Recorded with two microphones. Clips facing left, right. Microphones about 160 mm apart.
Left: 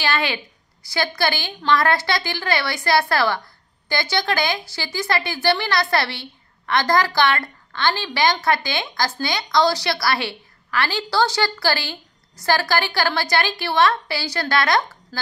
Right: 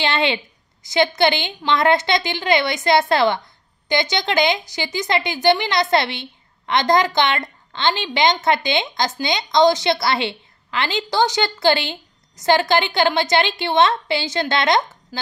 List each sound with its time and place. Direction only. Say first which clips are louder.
0.0 s a woman's voice: right 3 dB; 25° right (ahead or behind)